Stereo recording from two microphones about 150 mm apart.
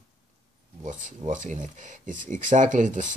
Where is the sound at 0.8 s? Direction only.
55° right (ahead or behind).